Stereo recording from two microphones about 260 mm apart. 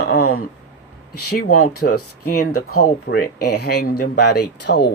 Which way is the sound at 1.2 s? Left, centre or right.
Left.